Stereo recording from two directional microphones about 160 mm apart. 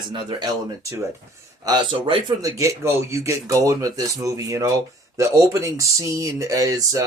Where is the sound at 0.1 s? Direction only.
30° right (ahead or behind).